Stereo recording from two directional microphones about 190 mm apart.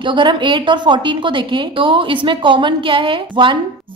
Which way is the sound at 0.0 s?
25° right (ahead or behind).